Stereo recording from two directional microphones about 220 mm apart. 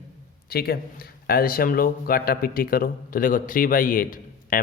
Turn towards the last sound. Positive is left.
turn(degrees=40)  # may be behind; listen again after turning